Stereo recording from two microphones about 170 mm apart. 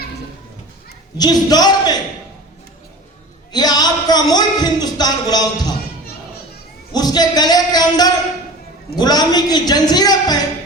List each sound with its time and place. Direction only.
1.2 s speech: 25° left (ahead or behind)
3.5 s speech: 25° left (ahead or behind)
6.9 s a sound: 25° left (ahead or behind)
9.0 s speech: 25° left (ahead or behind)